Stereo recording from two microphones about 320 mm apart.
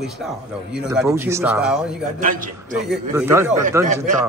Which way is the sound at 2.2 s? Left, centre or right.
Right.